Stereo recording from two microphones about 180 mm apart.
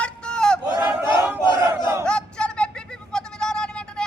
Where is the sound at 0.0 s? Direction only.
5° left (ahead or behind).